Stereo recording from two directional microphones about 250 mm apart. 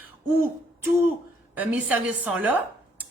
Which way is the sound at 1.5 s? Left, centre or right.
Centre.